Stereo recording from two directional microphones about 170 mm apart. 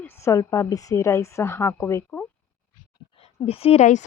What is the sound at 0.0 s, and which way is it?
A woman's voice, 15° left (ahead or behind).